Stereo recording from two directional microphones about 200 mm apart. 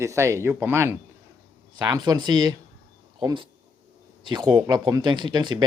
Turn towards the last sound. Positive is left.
turn(degrees=-20)  # may be behind; listen again after turning